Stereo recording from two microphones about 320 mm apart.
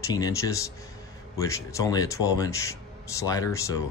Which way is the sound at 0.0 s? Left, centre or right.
Centre.